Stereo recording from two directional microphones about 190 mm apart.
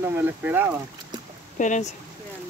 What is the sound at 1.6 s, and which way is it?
Speech, 40° left (ahead or behind).